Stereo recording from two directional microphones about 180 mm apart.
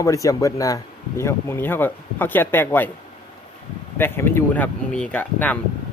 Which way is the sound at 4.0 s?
15° left (ahead or behind).